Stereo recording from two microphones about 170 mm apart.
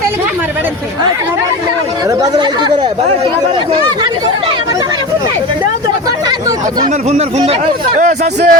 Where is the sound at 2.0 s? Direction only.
25° right (ahead or behind).